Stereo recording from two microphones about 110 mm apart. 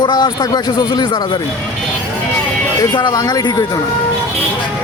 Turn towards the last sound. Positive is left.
turn(degrees=35)  # may be behind; listen again after turning